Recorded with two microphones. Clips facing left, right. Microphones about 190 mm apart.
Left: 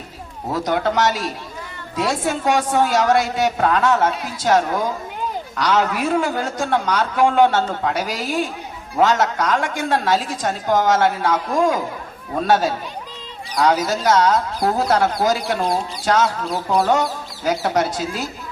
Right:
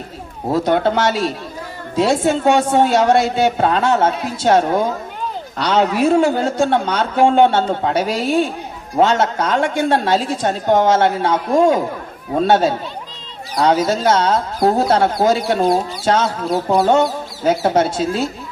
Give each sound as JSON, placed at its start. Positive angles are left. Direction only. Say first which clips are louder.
{"t": 0.5, "sound": "a woman's voice", "louder": "right 4 dB", "side_deg": -30}